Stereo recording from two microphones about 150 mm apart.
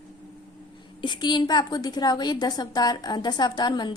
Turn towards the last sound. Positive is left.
turn(degrees=30)  # may be behind; listen again after turning